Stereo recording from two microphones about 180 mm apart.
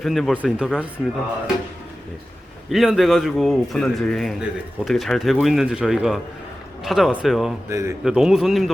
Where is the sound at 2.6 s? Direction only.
Centre (ahead or behind).